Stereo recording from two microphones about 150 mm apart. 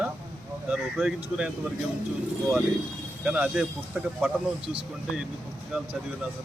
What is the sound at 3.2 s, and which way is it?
Speech, 10° right (ahead or behind).